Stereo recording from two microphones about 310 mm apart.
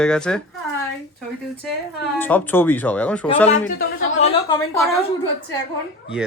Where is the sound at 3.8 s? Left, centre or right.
Left.